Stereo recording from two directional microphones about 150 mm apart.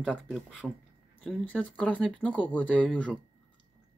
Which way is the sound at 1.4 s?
10° left (ahead or behind).